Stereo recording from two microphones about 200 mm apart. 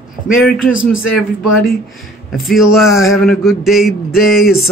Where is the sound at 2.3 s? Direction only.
Centre (ahead or behind).